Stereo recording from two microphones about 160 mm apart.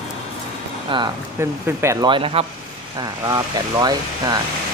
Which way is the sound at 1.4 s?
15° right (ahead or behind).